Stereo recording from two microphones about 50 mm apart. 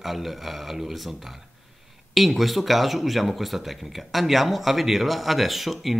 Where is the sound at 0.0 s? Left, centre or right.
Centre.